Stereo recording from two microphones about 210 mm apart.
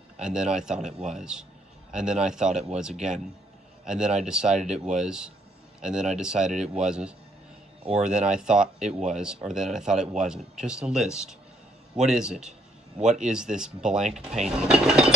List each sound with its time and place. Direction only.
0.2 s speech: 5° right (ahead or behind)
7.8 s speech: 30° right (ahead or behind)
8.1 s speech: 5° right (ahead or behind)